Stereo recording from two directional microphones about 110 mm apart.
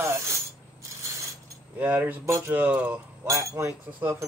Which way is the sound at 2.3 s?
30° right (ahead or behind).